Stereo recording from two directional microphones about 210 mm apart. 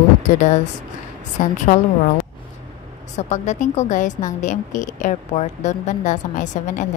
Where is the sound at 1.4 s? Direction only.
40° left (ahead or behind).